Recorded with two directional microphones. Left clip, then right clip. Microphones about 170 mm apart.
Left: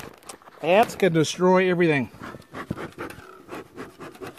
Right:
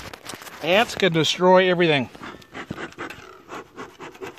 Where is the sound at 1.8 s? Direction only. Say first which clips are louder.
Right 2 dB; 25° right (ahead or behind).